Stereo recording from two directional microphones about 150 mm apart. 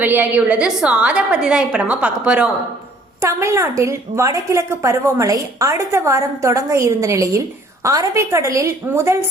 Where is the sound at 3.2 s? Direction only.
20° right (ahead or behind).